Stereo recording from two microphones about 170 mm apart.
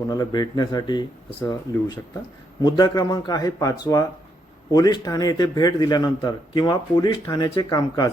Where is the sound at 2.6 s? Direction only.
25° left (ahead or behind).